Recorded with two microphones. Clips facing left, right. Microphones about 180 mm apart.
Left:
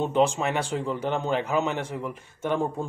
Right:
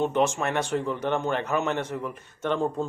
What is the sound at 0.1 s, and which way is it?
Speech, 15° left (ahead or behind).